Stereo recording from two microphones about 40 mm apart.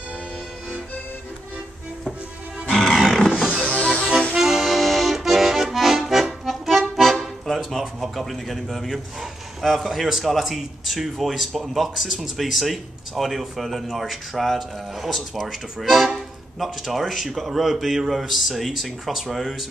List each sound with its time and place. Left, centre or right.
2.7 s music: centre
3.6 s music: left
4.4 s accordion: centre
7.4 s music: centre
8.0 s a man's voice: centre